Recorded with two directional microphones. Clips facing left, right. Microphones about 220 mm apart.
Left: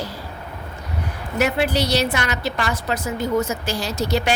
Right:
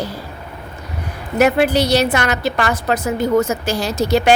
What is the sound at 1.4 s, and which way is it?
A woman's voice, 50° right (ahead or behind).